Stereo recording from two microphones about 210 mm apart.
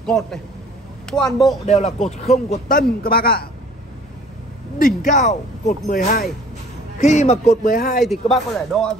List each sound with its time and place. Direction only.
0.0 s speech: centre (ahead or behind)
1.7 s a man's voice: 30° left (ahead or behind); by 3.4 s 45° left (ahead or behind)
4.7 s speech: 40° left (ahead or behind)
8.0 s speech: centre (ahead or behind)